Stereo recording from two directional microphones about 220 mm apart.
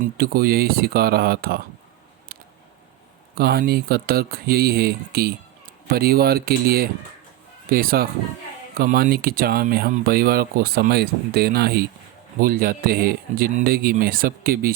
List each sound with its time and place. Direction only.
0.0 s speech: 45° right (ahead or behind)
3.3 s speech: 45° right (ahead or behind)